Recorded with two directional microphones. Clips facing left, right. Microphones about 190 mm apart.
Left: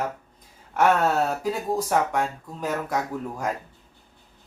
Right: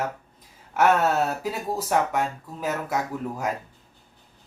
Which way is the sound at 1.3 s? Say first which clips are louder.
Left 3 dB; 5° right (ahead or behind).